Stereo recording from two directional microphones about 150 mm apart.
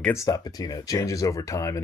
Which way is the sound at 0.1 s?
20° left (ahead or behind).